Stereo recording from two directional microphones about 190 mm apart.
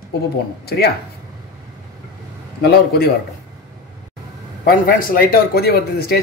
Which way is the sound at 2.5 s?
55° left (ahead or behind).